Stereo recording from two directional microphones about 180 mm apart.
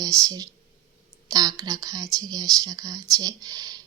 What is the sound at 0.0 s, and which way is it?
Speech, 20° right (ahead or behind).